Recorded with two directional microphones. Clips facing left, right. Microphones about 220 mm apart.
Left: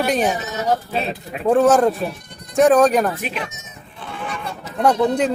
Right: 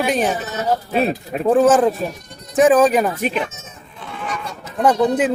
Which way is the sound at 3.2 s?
45° right (ahead or behind).